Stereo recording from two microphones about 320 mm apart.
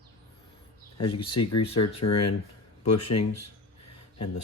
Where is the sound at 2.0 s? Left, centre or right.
Left.